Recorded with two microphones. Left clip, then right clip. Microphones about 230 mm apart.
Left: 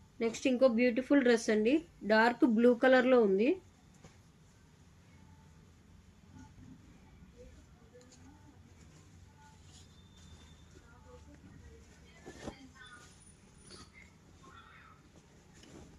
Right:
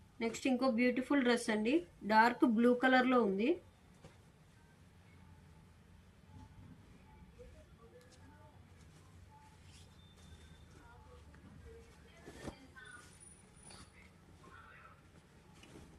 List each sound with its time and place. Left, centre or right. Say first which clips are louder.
0.2 s speech: left 7 dB; centre